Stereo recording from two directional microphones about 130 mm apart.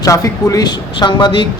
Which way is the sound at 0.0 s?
25° left (ahead or behind).